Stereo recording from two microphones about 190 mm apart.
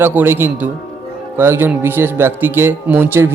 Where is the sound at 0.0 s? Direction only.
10° right (ahead or behind).